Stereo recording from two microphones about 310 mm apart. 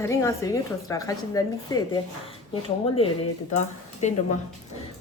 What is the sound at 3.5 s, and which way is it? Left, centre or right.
Speech, left.